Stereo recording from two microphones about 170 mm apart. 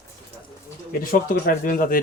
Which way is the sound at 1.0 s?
55° left (ahead or behind).